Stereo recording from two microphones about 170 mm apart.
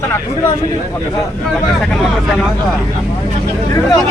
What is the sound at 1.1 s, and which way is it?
Speech, 5° left (ahead or behind).